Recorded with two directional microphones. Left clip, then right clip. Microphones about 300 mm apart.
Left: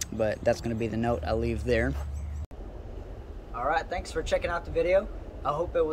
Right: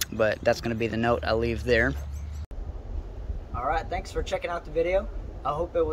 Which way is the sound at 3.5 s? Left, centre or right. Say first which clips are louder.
Even; centre.